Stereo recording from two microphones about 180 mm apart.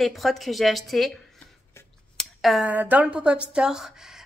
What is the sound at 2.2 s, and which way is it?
Speech, centre (ahead or behind).